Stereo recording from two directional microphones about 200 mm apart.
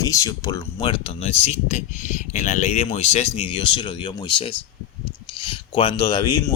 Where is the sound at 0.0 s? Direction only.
15° left (ahead or behind).